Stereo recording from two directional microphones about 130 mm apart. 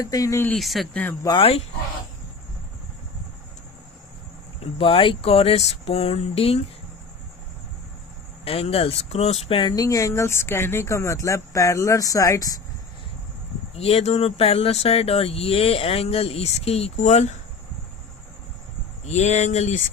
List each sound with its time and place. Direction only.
0.0 s speech: 25° left (ahead or behind)
0.5 s speech: centre (ahead or behind)
1.3 s speech: 45° left (ahead or behind)
4.6 s speech: 45° left (ahead or behind)
8.4 s speech: 50° left (ahead or behind); by 12.5 s 25° left (ahead or behind)
13.7 s speech: 50° left (ahead or behind)
19.0 s speech: 60° left (ahead or behind)